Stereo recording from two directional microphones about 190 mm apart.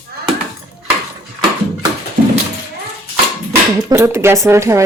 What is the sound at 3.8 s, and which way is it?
Speech, 15° right (ahead or behind).